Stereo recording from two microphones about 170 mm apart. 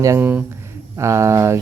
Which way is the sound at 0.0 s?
15° right (ahead or behind).